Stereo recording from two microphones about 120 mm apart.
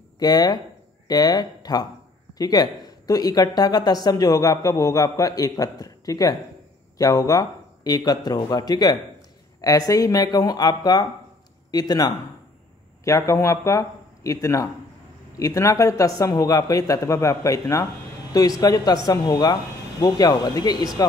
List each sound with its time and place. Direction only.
0.2 s a man's voice: 35° left (ahead or behind)